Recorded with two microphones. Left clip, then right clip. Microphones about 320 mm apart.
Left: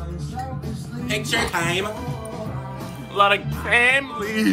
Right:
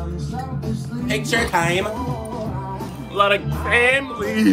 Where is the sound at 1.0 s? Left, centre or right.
Centre.